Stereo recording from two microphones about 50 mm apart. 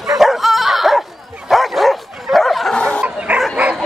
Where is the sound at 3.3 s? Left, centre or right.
Right.